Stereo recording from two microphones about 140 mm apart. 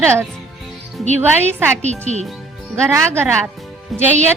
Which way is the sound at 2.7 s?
20° right (ahead or behind).